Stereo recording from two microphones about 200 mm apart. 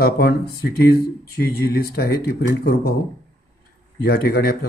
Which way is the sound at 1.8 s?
50° left (ahead or behind).